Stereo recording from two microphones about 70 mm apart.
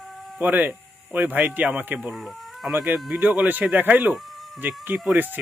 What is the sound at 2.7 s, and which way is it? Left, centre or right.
Speech, right.